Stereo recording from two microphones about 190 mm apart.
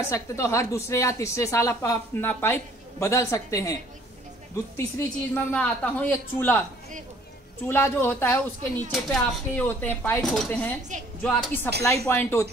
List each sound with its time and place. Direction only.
0.1 s speech: 15° left (ahead or behind)
4.7 s speech: 15° left (ahead or behind)
7.6 s speech: 10° left (ahead or behind)